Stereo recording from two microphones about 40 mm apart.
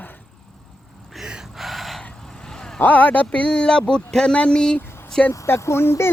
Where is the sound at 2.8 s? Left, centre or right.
Left.